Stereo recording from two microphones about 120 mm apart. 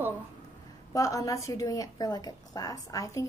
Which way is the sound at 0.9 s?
30° left (ahead or behind).